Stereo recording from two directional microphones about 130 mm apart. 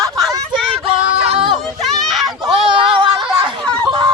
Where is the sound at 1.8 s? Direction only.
Centre (ahead or behind).